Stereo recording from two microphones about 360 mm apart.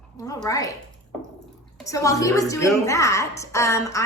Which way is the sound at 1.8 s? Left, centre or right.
Centre.